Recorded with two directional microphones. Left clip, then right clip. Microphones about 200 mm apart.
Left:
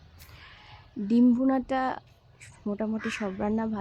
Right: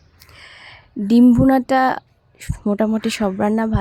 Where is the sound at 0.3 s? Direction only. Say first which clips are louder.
Right 11 dB; 40° right (ahead or behind).